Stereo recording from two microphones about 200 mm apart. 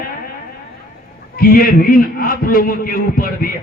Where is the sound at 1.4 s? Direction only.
45° left (ahead or behind).